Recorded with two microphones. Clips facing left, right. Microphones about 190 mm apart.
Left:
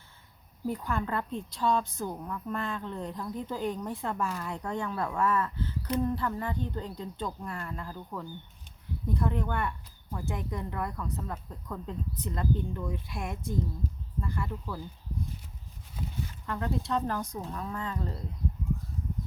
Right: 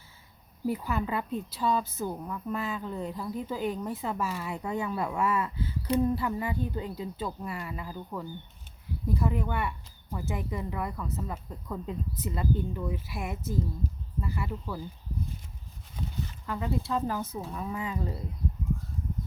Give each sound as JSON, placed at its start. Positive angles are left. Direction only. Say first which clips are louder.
{"t": 0.7, "sound": "a woman's voice", "louder": "right 1 dB", "side_deg": -5}
{"t": 16.5, "sound": "a woman's voice", "louder": "even", "side_deg": -5}